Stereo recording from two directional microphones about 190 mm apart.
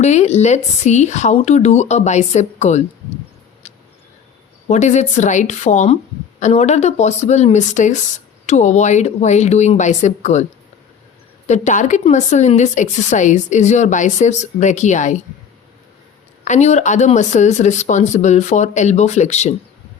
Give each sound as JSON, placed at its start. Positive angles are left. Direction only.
{"t": 0.0, "sound": "a woman's voice", "side_deg": 35}
{"t": 4.7, "sound": "a woman's voice", "side_deg": 40}
{"t": 11.4, "sound": "a woman's voice", "side_deg": 35}
{"t": 16.4, "sound": "a woman's voice", "side_deg": 40}